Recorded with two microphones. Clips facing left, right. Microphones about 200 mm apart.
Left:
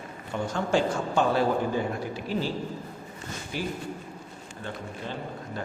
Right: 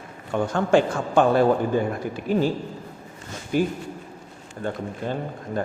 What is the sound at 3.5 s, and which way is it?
Speech, 50° right (ahead or behind).